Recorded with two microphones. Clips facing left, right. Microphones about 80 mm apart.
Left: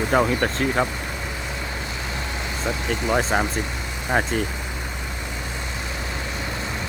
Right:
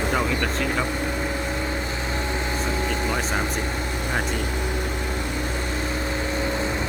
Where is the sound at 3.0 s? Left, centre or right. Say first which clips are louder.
Left 4 dB; left.